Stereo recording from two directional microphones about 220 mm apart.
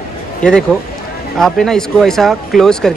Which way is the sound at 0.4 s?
5° left (ahead or behind).